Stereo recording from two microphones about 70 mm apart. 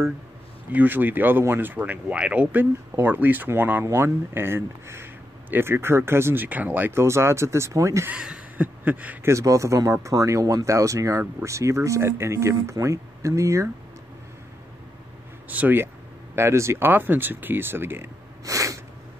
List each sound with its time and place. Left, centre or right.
0.7 s speech: right
6.9 s speech: right
8.1 s speech: centre
8.5 s a sound: right
9.2 s speech: right
15.5 s speech: right
16.3 s speech: right
18.4 s sneeze: right